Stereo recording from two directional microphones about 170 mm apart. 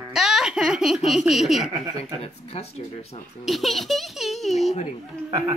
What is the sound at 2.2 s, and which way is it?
Speech, 35° left (ahead or behind).